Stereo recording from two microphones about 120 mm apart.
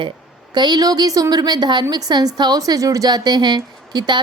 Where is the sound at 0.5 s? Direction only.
35° right (ahead or behind).